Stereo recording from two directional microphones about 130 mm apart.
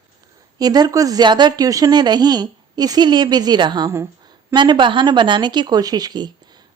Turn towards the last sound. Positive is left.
turn(degrees=-35)  # may be behind; listen again after turning